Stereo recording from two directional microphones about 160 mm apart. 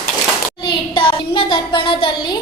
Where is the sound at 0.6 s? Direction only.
30° left (ahead or behind).